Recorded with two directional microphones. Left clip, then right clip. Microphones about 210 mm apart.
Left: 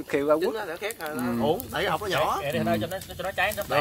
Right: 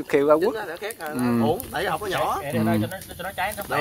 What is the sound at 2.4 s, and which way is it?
Speech, 45° left (ahead or behind).